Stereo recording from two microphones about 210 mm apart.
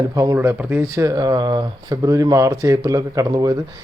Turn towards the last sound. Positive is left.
turn(degrees=-15)  # may be behind; listen again after turning